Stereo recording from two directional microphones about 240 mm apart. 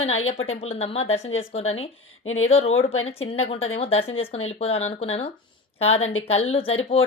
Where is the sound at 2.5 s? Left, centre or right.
Left.